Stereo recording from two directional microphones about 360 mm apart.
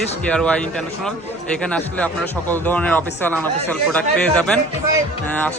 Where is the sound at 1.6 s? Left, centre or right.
Centre.